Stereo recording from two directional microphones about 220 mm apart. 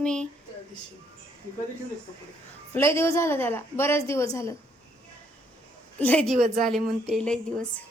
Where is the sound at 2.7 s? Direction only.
10° left (ahead or behind).